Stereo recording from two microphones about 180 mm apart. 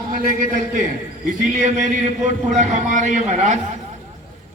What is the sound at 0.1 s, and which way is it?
Speech, 50° right (ahead or behind).